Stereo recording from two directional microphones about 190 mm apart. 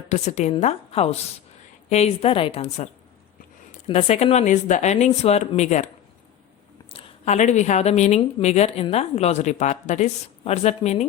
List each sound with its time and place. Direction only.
0.1 s a woman's voice: 40° left (ahead or behind)
6.9 s a woman's voice: 35° left (ahead or behind)